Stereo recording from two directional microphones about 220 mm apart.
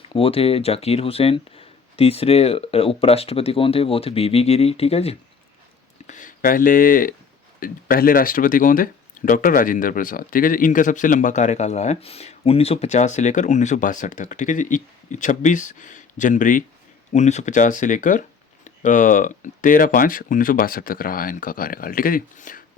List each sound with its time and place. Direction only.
0.1 s speech: 25° left (ahead or behind)